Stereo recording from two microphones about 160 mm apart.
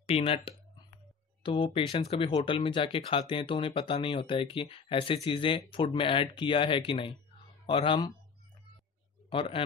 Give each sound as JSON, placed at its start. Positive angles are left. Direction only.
{"t": 0.0, "sound": "speech", "side_deg": 35}
{"t": 9.3, "sound": "speech", "side_deg": 35}